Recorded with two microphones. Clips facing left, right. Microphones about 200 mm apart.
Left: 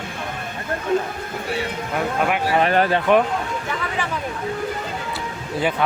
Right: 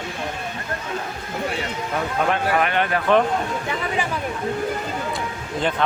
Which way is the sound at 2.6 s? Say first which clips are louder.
Left 4 dB; 35° left (ahead or behind).